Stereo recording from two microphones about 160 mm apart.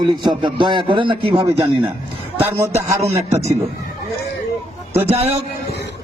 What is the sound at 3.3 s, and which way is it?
Speech, 45° right (ahead or behind).